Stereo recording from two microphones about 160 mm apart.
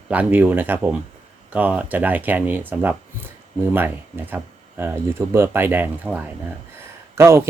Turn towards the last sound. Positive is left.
turn(degrees=-15)  # may be behind; listen again after turning